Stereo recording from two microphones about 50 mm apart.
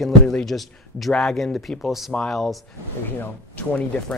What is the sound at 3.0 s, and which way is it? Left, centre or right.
Speech, left.